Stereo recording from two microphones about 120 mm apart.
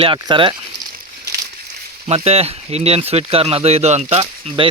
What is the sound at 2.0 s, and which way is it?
Speech, 60° right (ahead or behind).